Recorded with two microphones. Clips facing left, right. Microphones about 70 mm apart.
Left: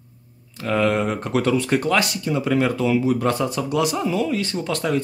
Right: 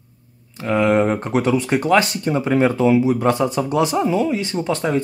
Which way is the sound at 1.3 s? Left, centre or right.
Centre.